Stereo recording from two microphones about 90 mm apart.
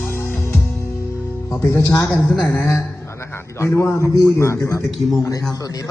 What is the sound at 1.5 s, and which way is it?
Speech, 30° left (ahead or behind).